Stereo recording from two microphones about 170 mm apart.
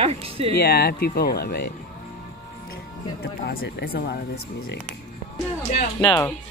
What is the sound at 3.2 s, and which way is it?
Speech, 85° left.